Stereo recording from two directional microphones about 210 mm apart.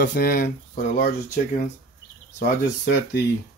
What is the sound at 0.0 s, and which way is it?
Speech, 40° left (ahead or behind).